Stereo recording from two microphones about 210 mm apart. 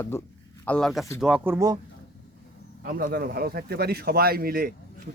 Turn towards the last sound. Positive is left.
turn(degrees=-45)  # may be behind; listen again after turning